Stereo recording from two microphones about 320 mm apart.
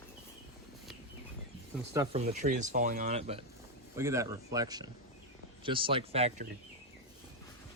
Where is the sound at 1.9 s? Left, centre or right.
Centre.